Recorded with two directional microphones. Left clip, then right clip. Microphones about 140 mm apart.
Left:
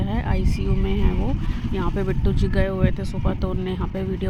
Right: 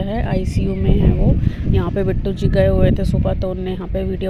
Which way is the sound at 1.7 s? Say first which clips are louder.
Right 6 dB; 20° right (ahead or behind).